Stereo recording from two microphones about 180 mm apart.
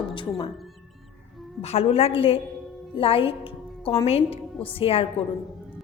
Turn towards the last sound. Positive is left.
turn(degrees=30)  # may be behind; listen again after turning